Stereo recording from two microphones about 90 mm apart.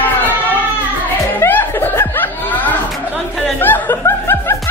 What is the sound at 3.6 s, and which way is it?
Laughter, 25° left (ahead or behind).